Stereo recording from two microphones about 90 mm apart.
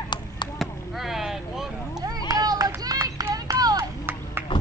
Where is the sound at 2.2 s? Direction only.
45° right (ahead or behind).